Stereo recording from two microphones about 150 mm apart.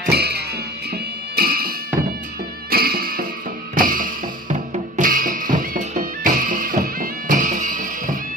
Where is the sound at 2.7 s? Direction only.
85° right.